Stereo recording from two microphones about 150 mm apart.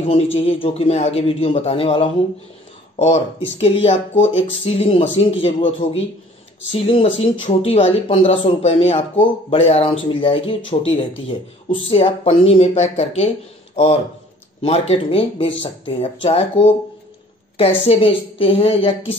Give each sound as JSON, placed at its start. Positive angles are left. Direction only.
{"t": 0.1, "sound": "speech", "side_deg": 40}
{"t": 14.6, "sound": "speech", "side_deg": 40}